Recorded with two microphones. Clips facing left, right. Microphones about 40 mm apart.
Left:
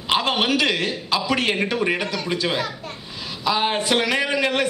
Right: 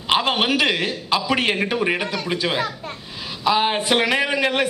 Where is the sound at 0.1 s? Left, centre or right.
Centre.